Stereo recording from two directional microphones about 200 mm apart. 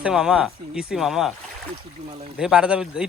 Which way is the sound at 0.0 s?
5° right (ahead or behind).